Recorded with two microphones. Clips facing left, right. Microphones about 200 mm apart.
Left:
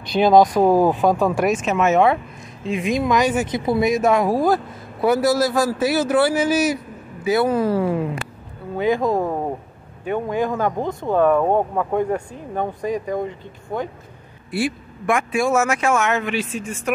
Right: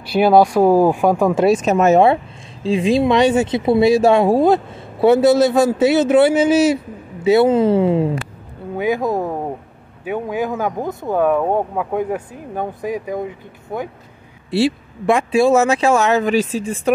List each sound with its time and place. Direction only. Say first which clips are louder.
0.0 s speech: right 1 dB; 10° right (ahead or behind)
1.4 s speech: right 5 dB; 35° right (ahead or behind)
8.7 s speech: even; 10° right (ahead or behind)
14.5 s speech: right 6 dB; 25° right (ahead or behind)